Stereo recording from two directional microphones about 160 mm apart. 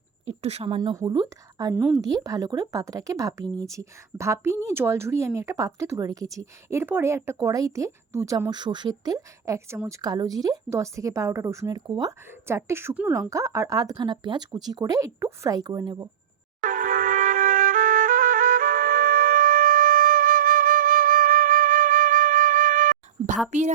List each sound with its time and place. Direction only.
0.3 s speech: 40° right (ahead or behind)
0.8 s speech: 25° right (ahead or behind)
1.7 s a woman's voice: 10° right (ahead or behind)
2.0 s speech: 25° right (ahead or behind)
16.6 s music: 55° right (ahead or behind)
23.5 s a woman's voice: 45° right (ahead or behind)